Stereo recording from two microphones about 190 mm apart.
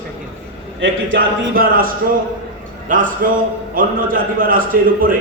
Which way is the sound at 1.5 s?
50° right (ahead or behind).